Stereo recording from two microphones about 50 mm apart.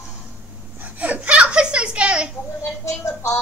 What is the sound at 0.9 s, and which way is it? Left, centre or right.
Speech, right.